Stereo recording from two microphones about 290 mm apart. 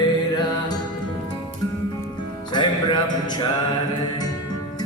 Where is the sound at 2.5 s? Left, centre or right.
Centre.